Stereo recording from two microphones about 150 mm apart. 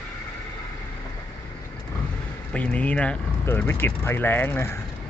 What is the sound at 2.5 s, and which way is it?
Speech, 10° left (ahead or behind).